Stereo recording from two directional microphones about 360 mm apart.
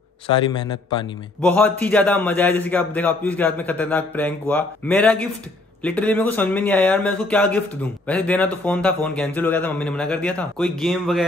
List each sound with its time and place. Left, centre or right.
0.5 s a man's voice: centre